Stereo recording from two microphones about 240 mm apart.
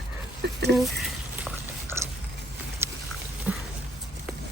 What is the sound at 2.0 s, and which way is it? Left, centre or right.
Biting, centre.